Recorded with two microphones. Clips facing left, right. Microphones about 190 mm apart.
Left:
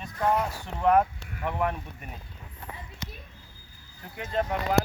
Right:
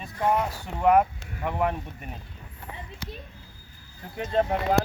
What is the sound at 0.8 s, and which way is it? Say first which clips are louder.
Speech: right 2 dB; 10° right (ahead or behind).